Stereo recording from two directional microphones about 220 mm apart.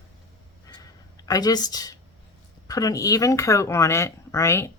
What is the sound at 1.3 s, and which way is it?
Speech, 15° left (ahead or behind).